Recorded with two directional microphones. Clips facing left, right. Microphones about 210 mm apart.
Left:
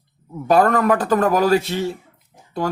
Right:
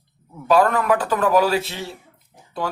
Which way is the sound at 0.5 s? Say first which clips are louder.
Left 2 dB; 40° left (ahead or behind).